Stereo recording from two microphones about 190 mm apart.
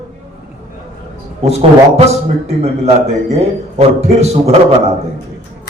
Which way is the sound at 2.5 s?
35° right (ahead or behind).